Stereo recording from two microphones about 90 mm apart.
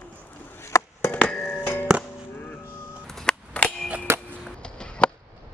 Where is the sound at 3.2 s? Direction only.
10° left (ahead or behind).